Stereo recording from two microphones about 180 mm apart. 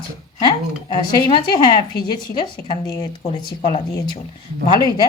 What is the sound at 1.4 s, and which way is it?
Speech, 25° left (ahead or behind).